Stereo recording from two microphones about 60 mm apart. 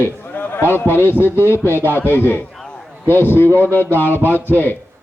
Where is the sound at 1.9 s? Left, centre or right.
Left.